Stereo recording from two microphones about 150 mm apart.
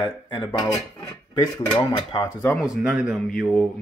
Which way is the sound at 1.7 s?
25° left (ahead or behind).